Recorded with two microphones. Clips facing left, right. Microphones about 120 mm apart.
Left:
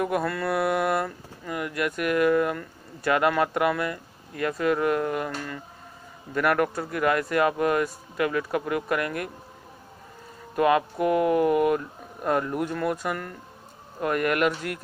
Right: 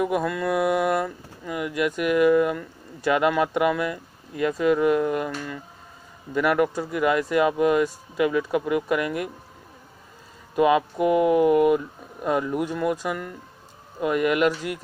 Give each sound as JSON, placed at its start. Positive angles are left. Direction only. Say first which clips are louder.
{"t": 0.2, "sound": "speech", "louder": "right 2 dB", "side_deg": -15}
{"t": 0.5, "sound": "speech", "louder": "right 3 dB", "side_deg": 0}
{"t": 1.0, "sound": "speech", "louder": "right 2 dB", "side_deg": -10}
{"t": 4.6, "sound": "speech", "louder": "right 4 dB", "side_deg": 45}
{"t": 5.2, "sound": "speech", "louder": "right 2 dB", "side_deg": -10}
{"t": 10.5, "sound": "speech", "louder": "right 2 dB", "side_deg": -10}